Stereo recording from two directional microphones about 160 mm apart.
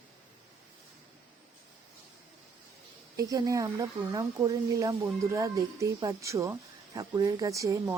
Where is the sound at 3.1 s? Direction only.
20° right (ahead or behind).